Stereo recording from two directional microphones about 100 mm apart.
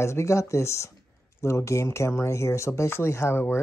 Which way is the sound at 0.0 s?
30° left (ahead or behind).